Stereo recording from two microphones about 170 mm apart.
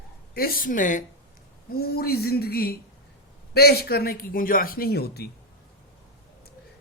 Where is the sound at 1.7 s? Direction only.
65° left (ahead or behind).